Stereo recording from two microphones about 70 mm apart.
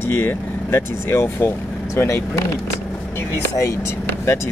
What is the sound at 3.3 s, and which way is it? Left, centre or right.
Speech, left.